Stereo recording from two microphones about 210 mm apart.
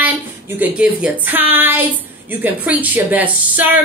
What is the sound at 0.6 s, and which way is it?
A woman's voice, 5° right (ahead or behind).